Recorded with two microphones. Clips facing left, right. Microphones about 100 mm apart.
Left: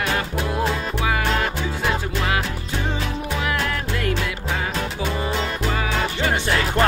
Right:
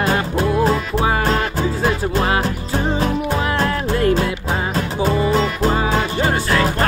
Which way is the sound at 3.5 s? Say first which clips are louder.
Right 6 dB; 35° right (ahead or behind).